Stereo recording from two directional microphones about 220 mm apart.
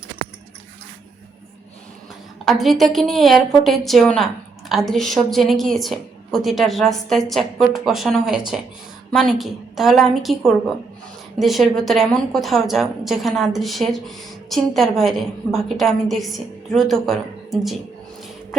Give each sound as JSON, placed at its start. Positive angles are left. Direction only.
{"t": 2.4, "sound": "a woman's voice", "side_deg": 0}